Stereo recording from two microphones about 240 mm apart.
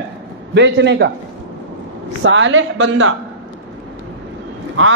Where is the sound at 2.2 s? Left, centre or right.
Right.